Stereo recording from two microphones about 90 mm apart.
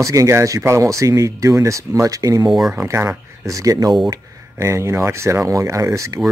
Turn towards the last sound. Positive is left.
turn(degrees=-35)  # may be behind; listen again after turning